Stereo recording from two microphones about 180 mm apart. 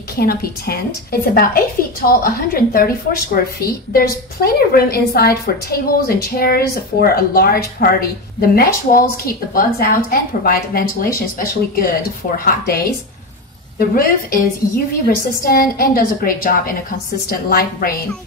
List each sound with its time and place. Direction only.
0.2 s a woman's voice: 60° left (ahead or behind)